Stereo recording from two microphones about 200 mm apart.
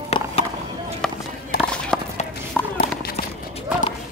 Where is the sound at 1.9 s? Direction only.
5° left (ahead or behind).